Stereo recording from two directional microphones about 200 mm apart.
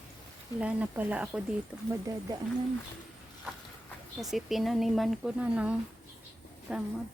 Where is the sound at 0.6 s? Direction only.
5° right (ahead or behind).